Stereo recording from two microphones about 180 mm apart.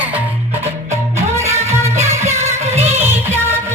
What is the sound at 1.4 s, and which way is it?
Music, 40° right (ahead or behind).